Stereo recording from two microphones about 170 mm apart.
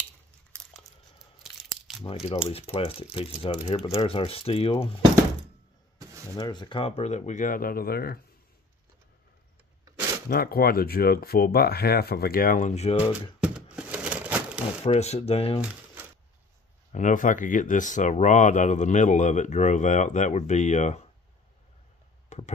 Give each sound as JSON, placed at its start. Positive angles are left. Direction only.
{"t": 1.4, "sound": "crunch", "side_deg": 0}
{"t": 2.5, "sound": "speech", "side_deg": 35}
{"t": 6.3, "sound": "speech", "side_deg": 25}
{"t": 10.3, "sound": "speech", "side_deg": 60}
{"t": 13.4, "sound": "a sound", "side_deg": -5}
{"t": 14.9, "sound": "speech", "side_deg": 40}
{"t": 15.7, "sound": "a sound", "side_deg": -10}
{"t": 16.9, "sound": "speech", "side_deg": 50}